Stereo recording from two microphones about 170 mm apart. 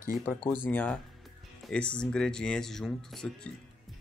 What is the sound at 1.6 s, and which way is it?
Music, 5° left (ahead or behind).